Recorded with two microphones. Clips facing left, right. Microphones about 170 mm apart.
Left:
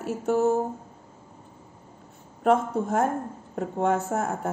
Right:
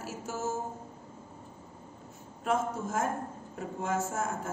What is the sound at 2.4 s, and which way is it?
A woman's voice, 60° left (ahead or behind).